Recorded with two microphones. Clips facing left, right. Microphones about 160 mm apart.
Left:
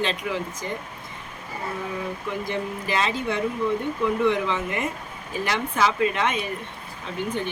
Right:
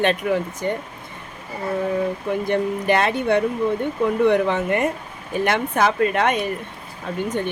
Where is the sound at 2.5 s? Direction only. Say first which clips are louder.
Right 10 dB; 60° right (ahead or behind).